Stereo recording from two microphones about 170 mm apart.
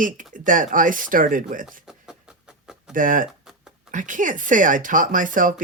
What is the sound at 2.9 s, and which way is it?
Speech, 50° right (ahead or behind).